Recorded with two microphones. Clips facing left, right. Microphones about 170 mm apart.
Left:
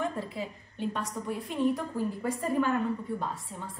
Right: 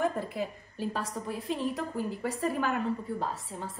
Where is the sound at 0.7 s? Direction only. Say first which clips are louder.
Even; 30° right (ahead or behind).